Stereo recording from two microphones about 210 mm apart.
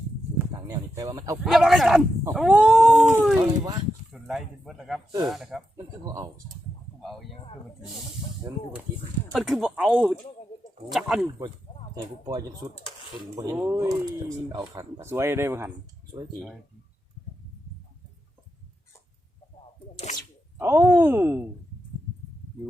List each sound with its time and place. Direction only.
0.5 s a sound: 15° right (ahead or behind)
1.4 s dog: centre (ahead or behind)
4.1 s speech: centre (ahead or behind)
5.2 s dog: centre (ahead or behind)
5.7 s speech: 15° right (ahead or behind)
9.3 s dog: centre (ahead or behind)
11.9 s speech: 20° right (ahead or behind)
20.6 s speech: 10° right (ahead or behind)